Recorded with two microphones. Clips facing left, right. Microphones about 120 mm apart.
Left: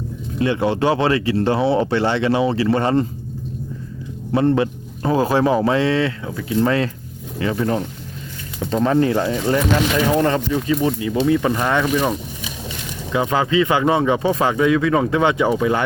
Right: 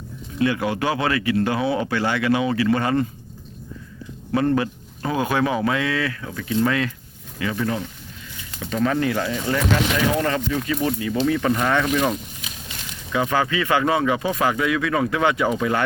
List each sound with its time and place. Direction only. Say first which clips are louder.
0.3 s speech: left 3 dB; 25° left (ahead or behind)
4.3 s speech: left 3 dB; 25° left (ahead or behind)
8.7 s speech: left 4 dB; 30° left (ahead or behind)
13.1 s speech: left 4 dB; 20° left (ahead or behind)